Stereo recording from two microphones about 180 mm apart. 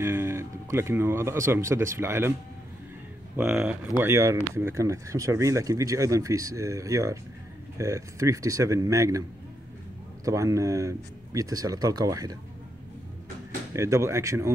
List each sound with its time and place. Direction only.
0.0 s speech: 15° right (ahead or behind)
3.3 s speech: 5° right (ahead or behind)
4.1 s speech: 15° right (ahead or behind)
10.2 s speech: 15° right (ahead or behind)
13.7 s speech: 15° right (ahead or behind)